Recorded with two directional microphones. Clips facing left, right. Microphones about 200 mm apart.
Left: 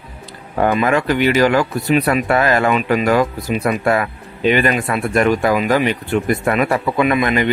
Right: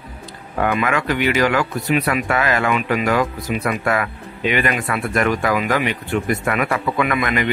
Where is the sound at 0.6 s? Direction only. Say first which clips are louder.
Left 4 dB; 35° left (ahead or behind).